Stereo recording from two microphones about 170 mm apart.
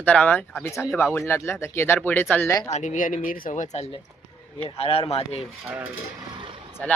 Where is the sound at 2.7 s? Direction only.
45° left (ahead or behind).